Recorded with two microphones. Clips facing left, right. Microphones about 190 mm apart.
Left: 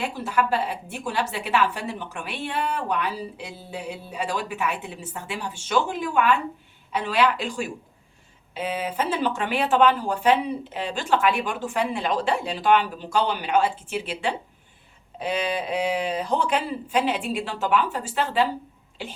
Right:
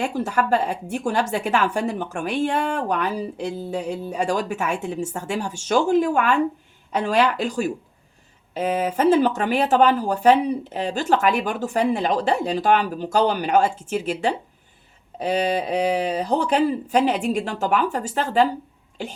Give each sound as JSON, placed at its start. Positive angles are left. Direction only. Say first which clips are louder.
{"t": 0.0, "sound": "speech", "louder": "right 3 dB", "side_deg": -45}